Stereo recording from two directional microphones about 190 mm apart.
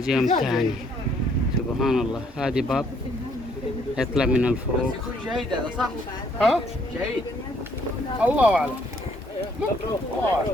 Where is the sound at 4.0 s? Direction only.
5° right (ahead or behind).